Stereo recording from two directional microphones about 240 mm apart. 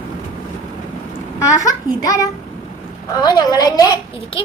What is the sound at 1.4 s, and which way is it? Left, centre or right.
A child's voice, centre.